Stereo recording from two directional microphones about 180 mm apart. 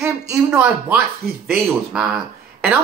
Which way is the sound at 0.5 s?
10° right (ahead or behind).